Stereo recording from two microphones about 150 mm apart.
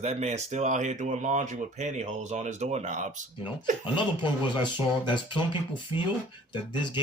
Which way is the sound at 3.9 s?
30° left (ahead or behind).